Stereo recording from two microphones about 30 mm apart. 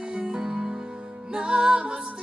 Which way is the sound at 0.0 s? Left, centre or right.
Right.